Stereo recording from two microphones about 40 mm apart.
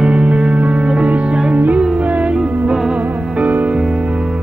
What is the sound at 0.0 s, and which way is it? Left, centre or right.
Music, right.